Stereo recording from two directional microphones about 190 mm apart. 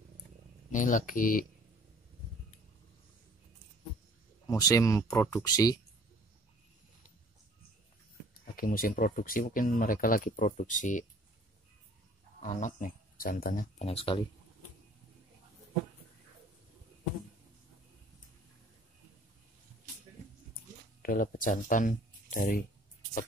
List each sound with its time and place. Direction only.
0.7 s speech: 45° left (ahead or behind)
4.5 s speech: 20° left (ahead or behind)
8.5 s speech: 50° left (ahead or behind)
12.4 s speech: 40° left (ahead or behind)
13.8 s speech: 30° left (ahead or behind)
21.0 s speech: 45° left (ahead or behind)